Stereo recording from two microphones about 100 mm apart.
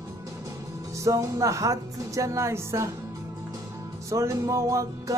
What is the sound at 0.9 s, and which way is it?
Music, 35° right (ahead or behind).